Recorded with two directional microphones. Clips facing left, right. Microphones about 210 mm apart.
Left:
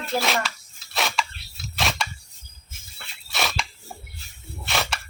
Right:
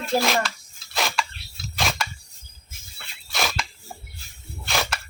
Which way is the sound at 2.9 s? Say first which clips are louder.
Right 1 dB; centre (ahead or behind).